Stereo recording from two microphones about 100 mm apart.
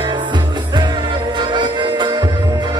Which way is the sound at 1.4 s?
50° right (ahead or behind).